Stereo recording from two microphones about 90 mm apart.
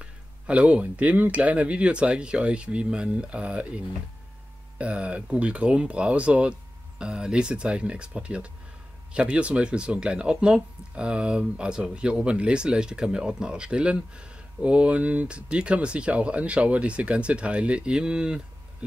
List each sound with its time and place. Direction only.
0.0 s speech: 15° right (ahead or behind)